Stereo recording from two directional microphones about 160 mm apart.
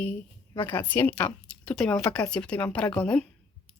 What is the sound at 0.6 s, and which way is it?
A woman's voice, 10° left (ahead or behind).